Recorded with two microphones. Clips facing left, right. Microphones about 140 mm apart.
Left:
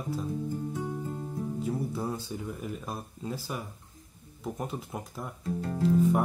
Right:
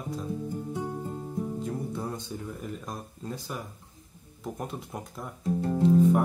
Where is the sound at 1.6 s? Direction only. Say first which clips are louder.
Left 1 dB; 5° left (ahead or behind).